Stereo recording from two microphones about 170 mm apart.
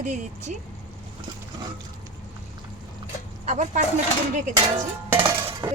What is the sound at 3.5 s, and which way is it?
Speech, 45° right (ahead or behind).